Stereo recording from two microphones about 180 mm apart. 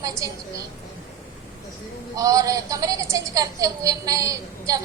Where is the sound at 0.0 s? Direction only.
15° right (ahead or behind).